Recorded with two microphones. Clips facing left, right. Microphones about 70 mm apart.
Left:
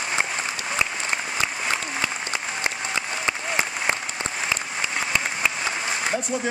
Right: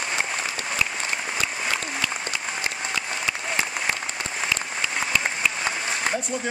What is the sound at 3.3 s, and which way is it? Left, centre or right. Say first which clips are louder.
Applause: left 2 dB; left.